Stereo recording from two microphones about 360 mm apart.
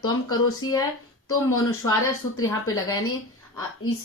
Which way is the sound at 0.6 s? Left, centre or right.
Left.